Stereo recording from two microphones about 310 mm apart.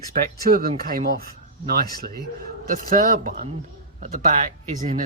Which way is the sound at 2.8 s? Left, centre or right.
Right.